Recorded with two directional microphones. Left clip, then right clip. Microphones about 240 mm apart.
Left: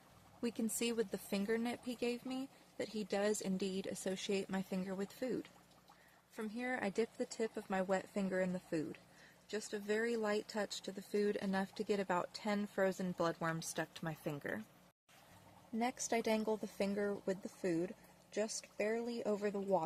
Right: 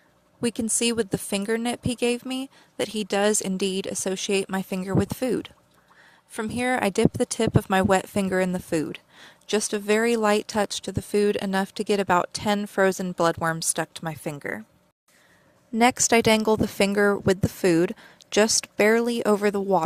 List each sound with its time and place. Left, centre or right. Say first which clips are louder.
0.4 s speech: right 15 dB; right
15.8 s speech: right 19 dB; right